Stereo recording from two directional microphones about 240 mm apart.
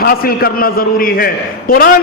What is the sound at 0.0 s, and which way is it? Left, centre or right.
A man's voice, left.